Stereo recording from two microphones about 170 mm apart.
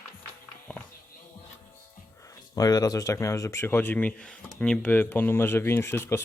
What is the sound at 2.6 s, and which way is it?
Speech, 20° left (ahead or behind).